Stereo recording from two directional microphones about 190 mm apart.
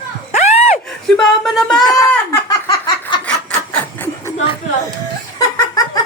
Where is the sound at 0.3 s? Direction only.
35° left (ahead or behind).